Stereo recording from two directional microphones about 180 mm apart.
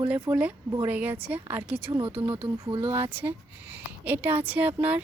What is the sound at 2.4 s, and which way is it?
Speech, 30° right (ahead or behind).